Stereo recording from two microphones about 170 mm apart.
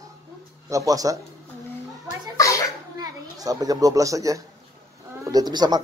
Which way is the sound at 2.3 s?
20° left (ahead or behind).